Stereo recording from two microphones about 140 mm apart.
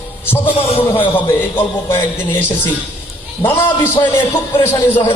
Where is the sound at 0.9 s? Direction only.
15° left (ahead or behind).